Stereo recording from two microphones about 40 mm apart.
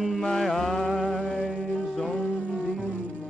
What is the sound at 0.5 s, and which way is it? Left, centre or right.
Music, centre.